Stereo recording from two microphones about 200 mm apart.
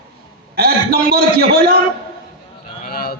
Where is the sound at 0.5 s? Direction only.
50° right (ahead or behind).